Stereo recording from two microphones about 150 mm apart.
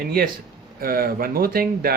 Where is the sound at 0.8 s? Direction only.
75° right (ahead or behind).